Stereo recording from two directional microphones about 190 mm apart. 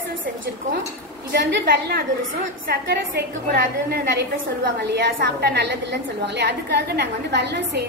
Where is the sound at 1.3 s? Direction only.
60° right (ahead or behind).